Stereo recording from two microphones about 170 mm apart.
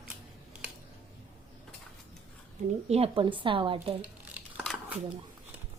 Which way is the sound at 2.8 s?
35° right (ahead or behind).